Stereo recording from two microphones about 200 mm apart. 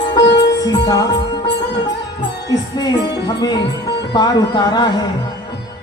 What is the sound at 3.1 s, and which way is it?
Speech, 20° left (ahead or behind).